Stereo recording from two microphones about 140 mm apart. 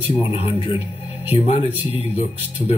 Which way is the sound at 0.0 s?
40° left (ahead or behind).